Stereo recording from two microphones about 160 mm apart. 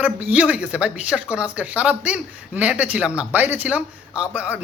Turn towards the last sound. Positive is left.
turn(degrees=-10)  # may be behind; listen again after turning